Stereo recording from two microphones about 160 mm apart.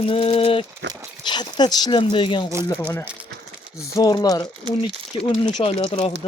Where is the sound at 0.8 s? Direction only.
90° right.